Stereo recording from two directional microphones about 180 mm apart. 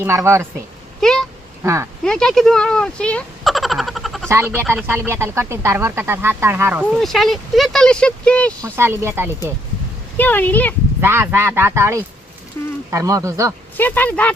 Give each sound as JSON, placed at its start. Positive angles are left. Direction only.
{"t": 0.0, "sound": "speech", "side_deg": -15}
{"t": 1.0, "sound": "duck", "side_deg": 0}
{"t": 1.6, "sound": "speech", "side_deg": -15}
{"t": 2.0, "sound": "speech", "side_deg": 5}
{"t": 4.3, "sound": "speech", "side_deg": -15}
{"t": 8.7, "sound": "speech", "side_deg": -15}
{"t": 10.2, "sound": "speech", "side_deg": 10}
{"t": 11.0, "sound": "speech", "side_deg": -15}
{"t": 12.6, "sound": "speech", "side_deg": 10}
{"t": 12.9, "sound": "speech", "side_deg": -20}
{"t": 13.7, "sound": "speech", "side_deg": 10}